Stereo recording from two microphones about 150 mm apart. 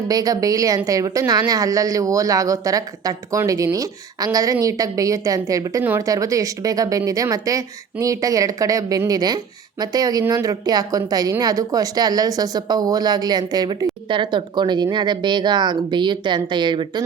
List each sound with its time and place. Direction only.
0.1 s a woman's voice: 25° right (ahead or behind)